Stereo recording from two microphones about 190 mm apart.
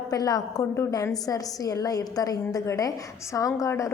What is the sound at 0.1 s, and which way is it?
A woman's voice, 20° left (ahead or behind).